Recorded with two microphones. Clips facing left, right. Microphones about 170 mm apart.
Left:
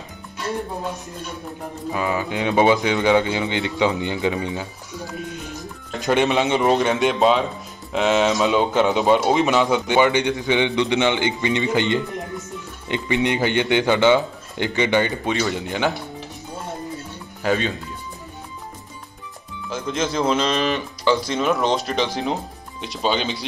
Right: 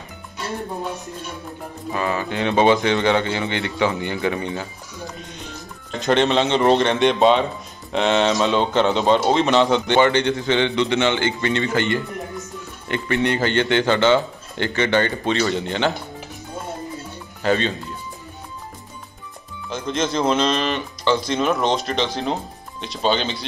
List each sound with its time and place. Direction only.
1.9 s speech: 15° left (ahead or behind)
5.9 s speech: 10° left (ahead or behind)
17.4 s speech: 10° left (ahead or behind)
19.7 s speech: 5° left (ahead or behind)